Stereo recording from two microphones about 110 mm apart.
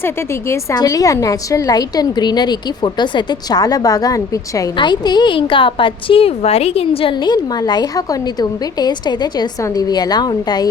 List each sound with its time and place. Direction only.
0.0 s a woman's voice: 25° left (ahead or behind)
4.8 s a woman's voice: 40° left (ahead or behind)
7.3 s a woman's voice: 35° left (ahead or behind)